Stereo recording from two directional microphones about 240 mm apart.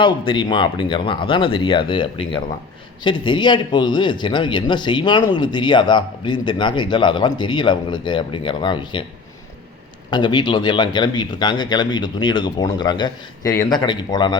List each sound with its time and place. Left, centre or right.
0.0 s speech: centre
10.1 s speech: centre